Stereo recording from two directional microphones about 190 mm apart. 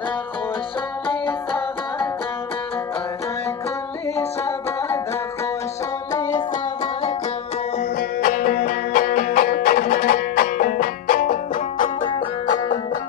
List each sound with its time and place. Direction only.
1.0 s music: 25° left (ahead or behind)
4.5 s music: 15° left (ahead or behind)
6.8 s music: 30° left (ahead or behind)
8.2 s music: 50° left (ahead or behind)